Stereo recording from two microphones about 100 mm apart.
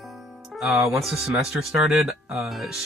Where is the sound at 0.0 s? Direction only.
Centre (ahead or behind).